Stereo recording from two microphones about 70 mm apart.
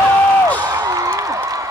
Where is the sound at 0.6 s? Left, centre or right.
Right.